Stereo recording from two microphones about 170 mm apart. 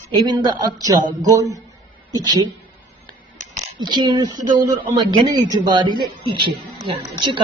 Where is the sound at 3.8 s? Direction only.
25° right (ahead or behind).